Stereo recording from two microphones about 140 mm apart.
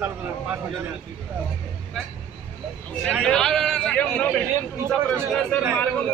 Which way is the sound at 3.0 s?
5° left (ahead or behind).